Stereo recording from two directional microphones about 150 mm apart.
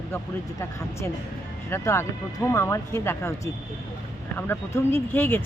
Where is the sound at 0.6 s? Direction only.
20° left (ahead or behind).